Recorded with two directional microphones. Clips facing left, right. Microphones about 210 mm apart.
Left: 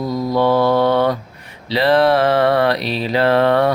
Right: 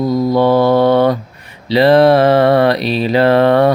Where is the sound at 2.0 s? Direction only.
45° right (ahead or behind).